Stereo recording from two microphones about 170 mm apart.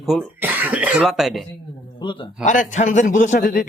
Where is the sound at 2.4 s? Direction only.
45° left (ahead or behind).